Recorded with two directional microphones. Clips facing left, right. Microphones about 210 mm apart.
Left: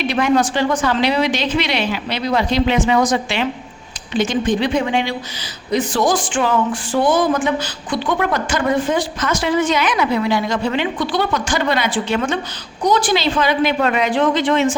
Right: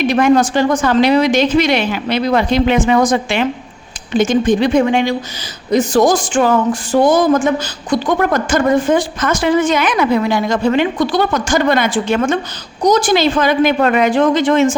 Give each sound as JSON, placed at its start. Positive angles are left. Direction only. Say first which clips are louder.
{"t": 0.0, "sound": "speech", "louder": "right 5 dB", "side_deg": -45}